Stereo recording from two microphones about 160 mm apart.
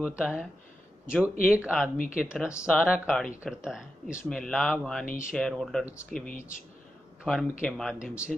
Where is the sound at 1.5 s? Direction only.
10° right (ahead or behind).